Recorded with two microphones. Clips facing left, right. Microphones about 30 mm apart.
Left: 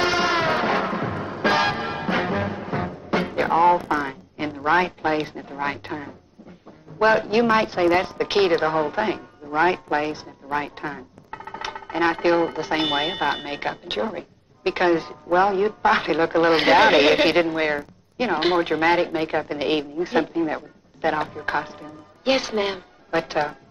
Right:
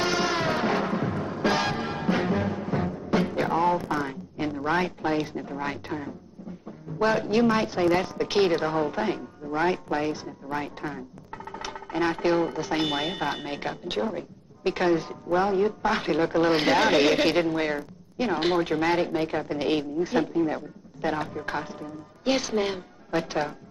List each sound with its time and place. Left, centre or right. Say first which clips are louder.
0.0 s music: left 5 dB; left
4.6 s a woman's voice: left 7 dB; left